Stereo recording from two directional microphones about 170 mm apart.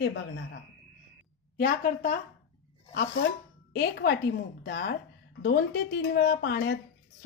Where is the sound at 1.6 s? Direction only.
55° left (ahead or behind).